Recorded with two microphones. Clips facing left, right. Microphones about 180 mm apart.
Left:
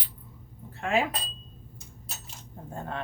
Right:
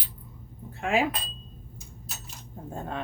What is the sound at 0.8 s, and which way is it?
Speech, 10° right (ahead or behind).